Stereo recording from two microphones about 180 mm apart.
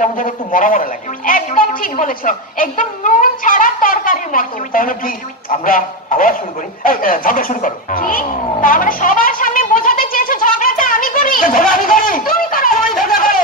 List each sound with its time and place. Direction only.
0.0 s speech: 50° left (ahead or behind)
6.8 s music: 50° left (ahead or behind)